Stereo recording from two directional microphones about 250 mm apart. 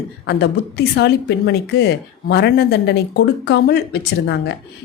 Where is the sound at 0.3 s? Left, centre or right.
Left.